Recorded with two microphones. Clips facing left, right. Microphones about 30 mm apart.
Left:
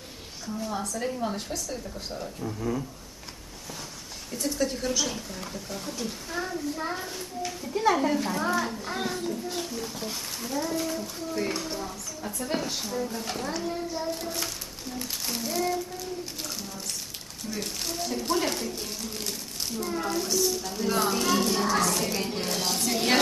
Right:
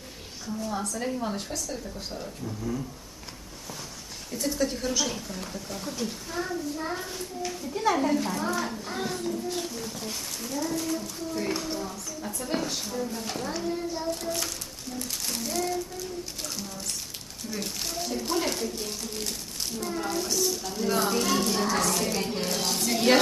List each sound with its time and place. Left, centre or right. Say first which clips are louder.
0.6 s speech: even; centre
2.6 s speech: left 2 dB; centre
4.3 s a child's voice: even; centre